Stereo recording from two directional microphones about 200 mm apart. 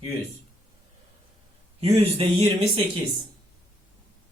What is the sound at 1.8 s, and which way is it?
A man's voice, 30° right (ahead or behind).